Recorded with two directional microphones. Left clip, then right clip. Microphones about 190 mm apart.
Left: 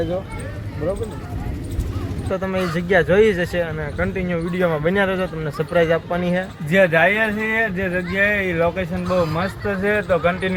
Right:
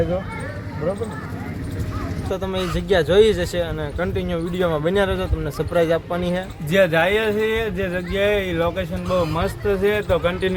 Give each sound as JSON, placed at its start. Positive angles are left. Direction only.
{"t": 2.3, "sound": "speech", "side_deg": 0}
{"t": 6.7, "sound": "speech", "side_deg": -25}